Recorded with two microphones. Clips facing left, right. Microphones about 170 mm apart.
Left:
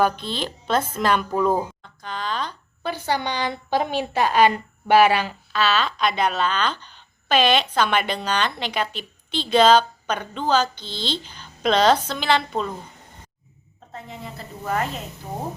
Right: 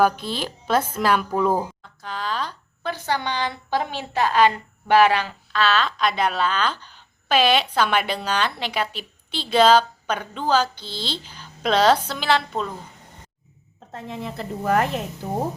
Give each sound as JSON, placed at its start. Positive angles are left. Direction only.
{"t": 0.0, "sound": "a woman's voice", "side_deg": -5}
{"t": 2.8, "sound": "a woman's voice", "side_deg": 10}
{"t": 13.9, "sound": "a woman's voice", "side_deg": -75}